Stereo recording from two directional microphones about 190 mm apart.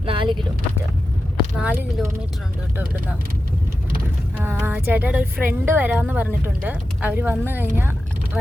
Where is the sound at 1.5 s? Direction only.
10° right (ahead or behind).